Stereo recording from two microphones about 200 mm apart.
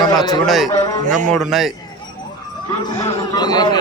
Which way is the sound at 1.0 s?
40° right (ahead or behind).